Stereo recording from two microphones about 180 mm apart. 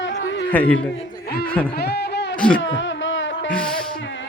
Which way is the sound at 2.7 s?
90° left.